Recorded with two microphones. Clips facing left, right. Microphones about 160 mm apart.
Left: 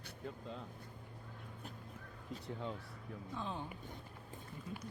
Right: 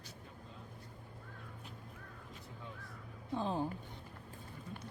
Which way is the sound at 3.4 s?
35° right (ahead or behind).